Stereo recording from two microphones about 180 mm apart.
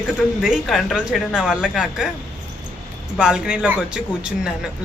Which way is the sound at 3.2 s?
5° right (ahead or behind).